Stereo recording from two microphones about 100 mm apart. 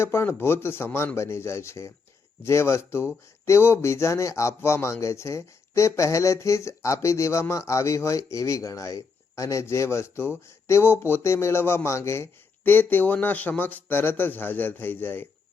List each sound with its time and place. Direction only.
0.0 s speech: 25° left (ahead or behind)